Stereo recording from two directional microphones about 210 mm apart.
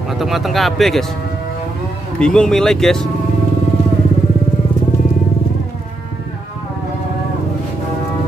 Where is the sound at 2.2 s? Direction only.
5° left (ahead or behind).